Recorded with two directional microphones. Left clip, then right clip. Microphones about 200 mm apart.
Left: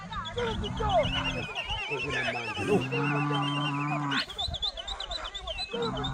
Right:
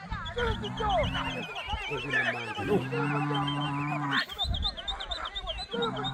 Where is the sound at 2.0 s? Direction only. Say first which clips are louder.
Right 5 dB; 55° right (ahead or behind).